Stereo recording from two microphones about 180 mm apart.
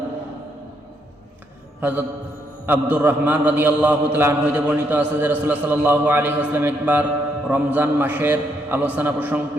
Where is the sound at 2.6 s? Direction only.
10° right (ahead or behind).